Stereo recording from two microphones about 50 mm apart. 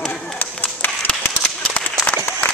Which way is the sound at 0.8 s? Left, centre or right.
Left.